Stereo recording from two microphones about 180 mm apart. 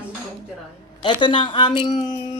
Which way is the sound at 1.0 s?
25° left (ahead or behind).